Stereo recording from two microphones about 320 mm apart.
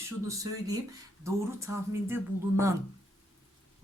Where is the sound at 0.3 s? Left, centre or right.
Centre.